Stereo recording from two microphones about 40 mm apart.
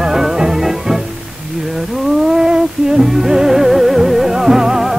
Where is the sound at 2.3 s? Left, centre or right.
Centre.